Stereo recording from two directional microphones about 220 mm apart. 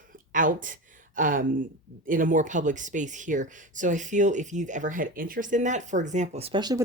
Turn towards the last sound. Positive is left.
turn(degrees=-20)  # may be behind; listen again after turning